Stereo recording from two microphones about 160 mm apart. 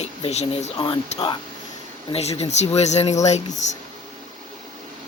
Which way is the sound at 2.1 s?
40° left (ahead or behind).